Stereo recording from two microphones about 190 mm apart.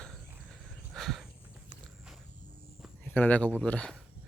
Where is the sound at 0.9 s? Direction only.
Centre (ahead or behind).